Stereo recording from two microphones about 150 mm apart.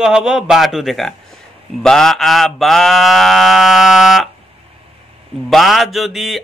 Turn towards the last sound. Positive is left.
turn(degrees=0)  # may be behind; listen again after turning